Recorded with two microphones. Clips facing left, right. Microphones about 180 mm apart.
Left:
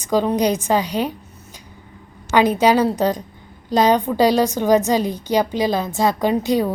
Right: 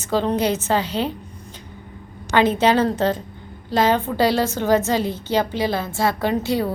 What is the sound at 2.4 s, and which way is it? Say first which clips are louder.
A woman's voice: left 2 dB; 10° left (ahead or behind).